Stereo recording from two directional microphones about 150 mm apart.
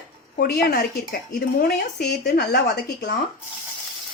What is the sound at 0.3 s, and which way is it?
Speech, 90° left.